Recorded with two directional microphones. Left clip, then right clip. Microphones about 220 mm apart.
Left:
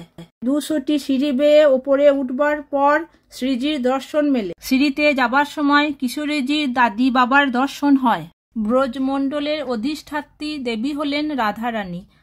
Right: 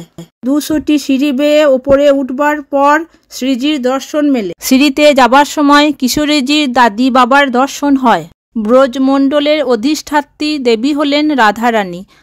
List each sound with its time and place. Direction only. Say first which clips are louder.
0.4 s speech: right 7 dB; 30° right (ahead or behind)
4.7 s speech: right 10 dB; 45° right (ahead or behind)